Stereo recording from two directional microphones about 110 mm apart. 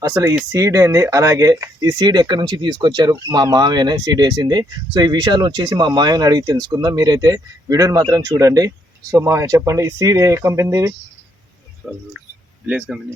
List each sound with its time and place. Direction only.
0.0 s speech: 30° right (ahead or behind)
12.6 s speech: 10° right (ahead or behind)